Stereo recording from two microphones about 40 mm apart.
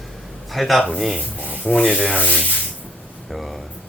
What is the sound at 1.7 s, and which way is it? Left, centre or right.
Rub, centre.